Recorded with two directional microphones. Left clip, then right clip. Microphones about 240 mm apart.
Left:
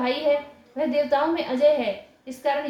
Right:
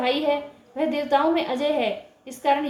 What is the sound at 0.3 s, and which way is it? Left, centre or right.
A woman's voice, right.